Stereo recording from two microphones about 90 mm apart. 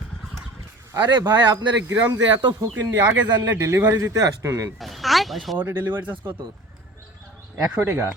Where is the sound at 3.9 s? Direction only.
35° right (ahead or behind).